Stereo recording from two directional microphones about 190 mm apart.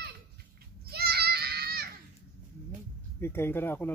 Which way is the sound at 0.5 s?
55° right (ahead or behind).